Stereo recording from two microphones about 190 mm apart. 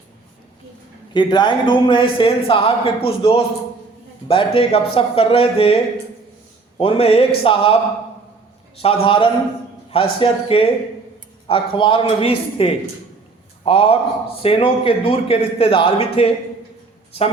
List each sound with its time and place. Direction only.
1.1 s speech: 25° left (ahead or behind)
8.8 s speech: 30° left (ahead or behind)